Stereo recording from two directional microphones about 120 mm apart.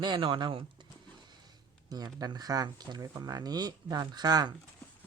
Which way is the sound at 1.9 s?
35° right (ahead or behind).